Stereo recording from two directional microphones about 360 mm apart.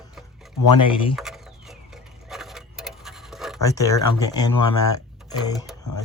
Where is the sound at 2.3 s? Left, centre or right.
Centre.